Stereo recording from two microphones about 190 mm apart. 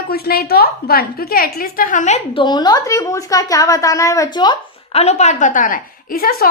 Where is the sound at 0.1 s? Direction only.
55° left (ahead or behind).